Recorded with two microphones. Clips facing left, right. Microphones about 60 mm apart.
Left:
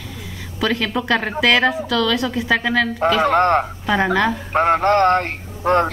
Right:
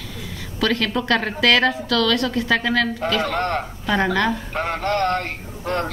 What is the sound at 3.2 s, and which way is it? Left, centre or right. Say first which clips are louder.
Speech: left 7 dB; left.